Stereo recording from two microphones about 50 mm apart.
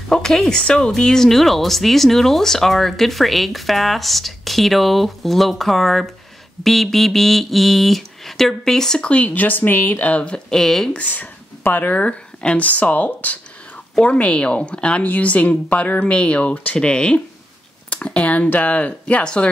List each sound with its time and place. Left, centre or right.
0.1 s speech: centre
9.0 s speech: left
10.6 s speech: centre
10.9 s a woman's voice: left